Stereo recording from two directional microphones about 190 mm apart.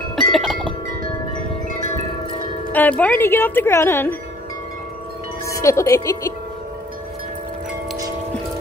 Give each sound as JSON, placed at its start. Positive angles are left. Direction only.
{"t": 0.1, "sound": "wind chime", "side_deg": 0}
{"t": 2.7, "sound": "speech", "side_deg": 10}
{"t": 5.5, "sound": "speech", "side_deg": 15}